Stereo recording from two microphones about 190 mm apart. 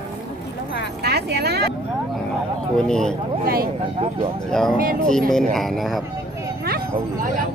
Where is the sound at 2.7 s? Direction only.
5° left (ahead or behind).